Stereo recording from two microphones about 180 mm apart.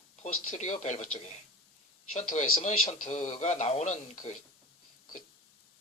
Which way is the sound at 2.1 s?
40° left (ahead or behind).